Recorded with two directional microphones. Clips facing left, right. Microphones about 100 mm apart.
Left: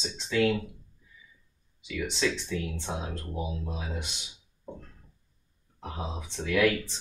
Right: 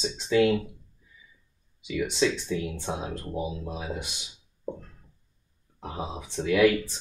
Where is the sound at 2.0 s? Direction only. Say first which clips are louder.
Right 4 dB; 15° right (ahead or behind).